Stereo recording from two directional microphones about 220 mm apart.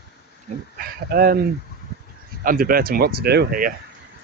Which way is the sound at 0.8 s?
40° right (ahead or behind).